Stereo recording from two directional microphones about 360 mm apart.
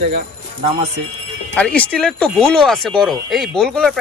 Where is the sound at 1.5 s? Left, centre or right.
Centre.